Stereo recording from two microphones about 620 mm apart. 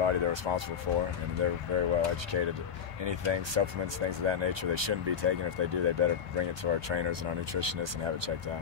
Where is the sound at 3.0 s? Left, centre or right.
Right.